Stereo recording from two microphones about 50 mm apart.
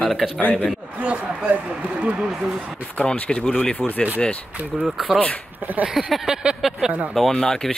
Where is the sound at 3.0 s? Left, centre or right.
Left.